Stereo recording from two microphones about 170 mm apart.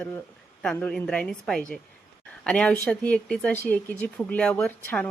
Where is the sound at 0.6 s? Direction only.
5° left (ahead or behind).